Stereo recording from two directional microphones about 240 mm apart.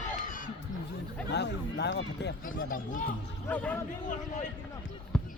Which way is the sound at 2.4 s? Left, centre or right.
Left.